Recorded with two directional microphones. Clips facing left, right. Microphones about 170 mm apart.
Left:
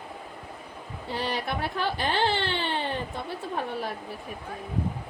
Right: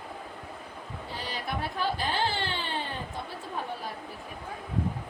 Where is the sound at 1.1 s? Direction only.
70° left (ahead or behind).